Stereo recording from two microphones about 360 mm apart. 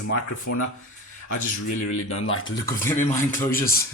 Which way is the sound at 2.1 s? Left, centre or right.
Left.